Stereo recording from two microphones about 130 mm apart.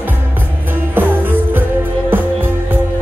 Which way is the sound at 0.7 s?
15° right (ahead or behind).